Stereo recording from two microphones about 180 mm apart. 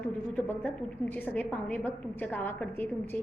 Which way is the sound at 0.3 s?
10° left (ahead or behind).